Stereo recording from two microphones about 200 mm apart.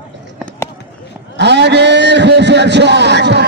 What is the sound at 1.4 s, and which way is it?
A man's voice, 60° right (ahead or behind).